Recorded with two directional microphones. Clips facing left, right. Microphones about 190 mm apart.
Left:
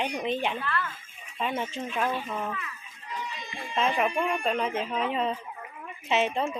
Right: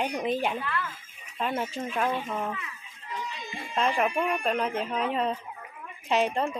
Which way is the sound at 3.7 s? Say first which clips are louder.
Even; centre (ahead or behind).